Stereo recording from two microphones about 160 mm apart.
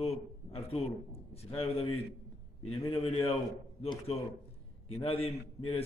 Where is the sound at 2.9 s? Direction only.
35° left (ahead or behind).